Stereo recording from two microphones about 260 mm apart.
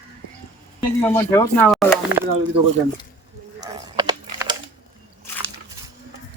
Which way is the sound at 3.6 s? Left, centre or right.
Centre.